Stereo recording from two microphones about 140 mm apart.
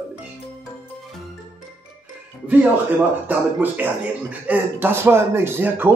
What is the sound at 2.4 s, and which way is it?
Speech, 10° right (ahead or behind).